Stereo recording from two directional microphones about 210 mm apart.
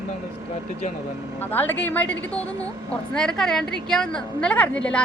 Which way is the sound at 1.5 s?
10° left (ahead or behind).